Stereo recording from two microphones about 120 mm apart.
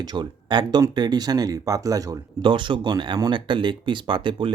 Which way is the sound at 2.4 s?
40° right (ahead or behind).